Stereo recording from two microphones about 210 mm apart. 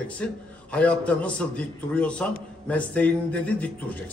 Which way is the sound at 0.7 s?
5° left (ahead or behind).